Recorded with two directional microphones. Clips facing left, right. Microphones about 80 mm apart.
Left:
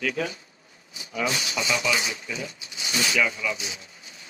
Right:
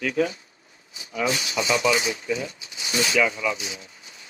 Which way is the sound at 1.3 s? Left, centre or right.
Right.